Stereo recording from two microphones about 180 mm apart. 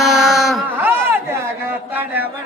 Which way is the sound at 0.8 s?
10° right (ahead or behind).